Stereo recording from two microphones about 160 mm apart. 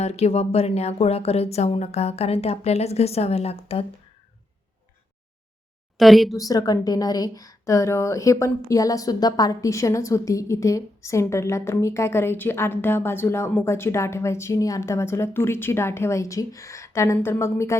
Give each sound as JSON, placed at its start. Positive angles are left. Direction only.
{"t": 0.0, "sound": "speech", "side_deg": 40}
{"t": 6.0, "sound": "a woman's voice", "side_deg": 0}
{"t": 6.3, "sound": "speech", "side_deg": 20}